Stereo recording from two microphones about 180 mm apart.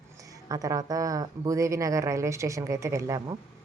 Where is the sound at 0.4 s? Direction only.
20° right (ahead or behind).